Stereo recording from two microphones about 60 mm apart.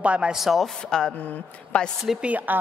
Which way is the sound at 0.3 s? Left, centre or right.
Centre.